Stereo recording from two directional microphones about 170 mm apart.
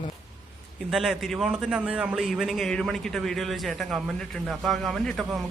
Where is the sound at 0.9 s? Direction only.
Centre (ahead or behind).